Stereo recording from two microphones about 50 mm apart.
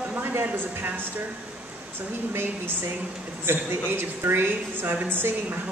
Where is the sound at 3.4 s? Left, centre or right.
Right.